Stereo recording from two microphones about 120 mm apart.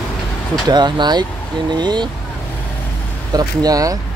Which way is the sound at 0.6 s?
35° right (ahead or behind).